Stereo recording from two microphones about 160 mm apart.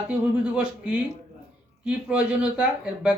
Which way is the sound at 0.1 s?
5° right (ahead or behind).